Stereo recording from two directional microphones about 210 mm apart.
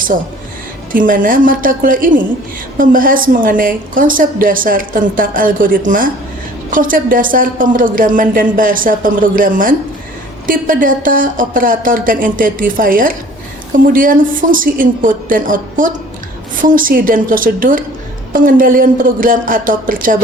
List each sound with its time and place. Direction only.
0.9 s a woman's voice: 40° right (ahead or behind)